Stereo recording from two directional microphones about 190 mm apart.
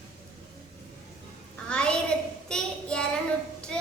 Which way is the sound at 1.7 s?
5° left (ahead or behind).